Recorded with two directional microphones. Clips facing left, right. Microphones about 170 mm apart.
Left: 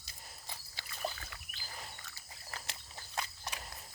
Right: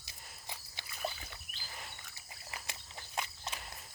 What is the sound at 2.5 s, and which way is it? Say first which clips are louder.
Walk: even; 15° right (ahead or behind).